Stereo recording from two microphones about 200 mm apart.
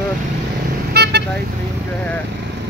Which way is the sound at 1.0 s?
55° right (ahead or behind).